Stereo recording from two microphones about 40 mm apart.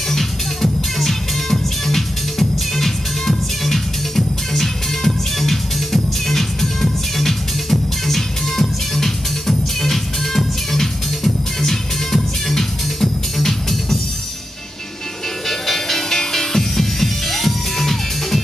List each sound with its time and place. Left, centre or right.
0.1 s music: centre
15.4 s music: centre